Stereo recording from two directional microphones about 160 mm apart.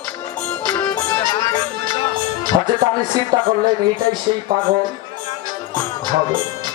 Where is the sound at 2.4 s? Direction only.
25° right (ahead or behind).